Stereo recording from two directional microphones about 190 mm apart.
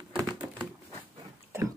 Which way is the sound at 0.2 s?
20° right (ahead or behind).